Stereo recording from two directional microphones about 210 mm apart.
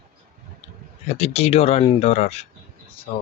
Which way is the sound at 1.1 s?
30° left (ahead or behind).